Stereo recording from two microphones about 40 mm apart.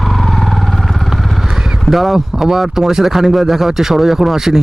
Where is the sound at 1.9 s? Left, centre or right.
Centre.